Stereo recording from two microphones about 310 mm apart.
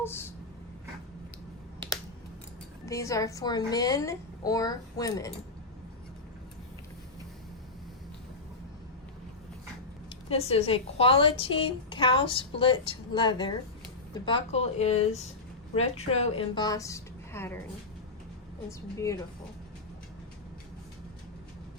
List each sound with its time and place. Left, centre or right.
0.0 s speech: centre
2.8 s a woman's voice: centre
10.2 s a woman's voice: centre
18.9 s a woman's voice: centre